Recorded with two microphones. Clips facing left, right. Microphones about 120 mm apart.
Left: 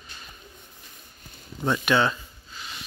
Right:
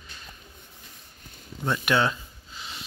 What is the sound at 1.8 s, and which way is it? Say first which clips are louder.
Speech: left 1 dB; 5° right (ahead or behind).